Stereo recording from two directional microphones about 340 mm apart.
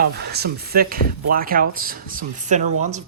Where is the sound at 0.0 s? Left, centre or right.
Right.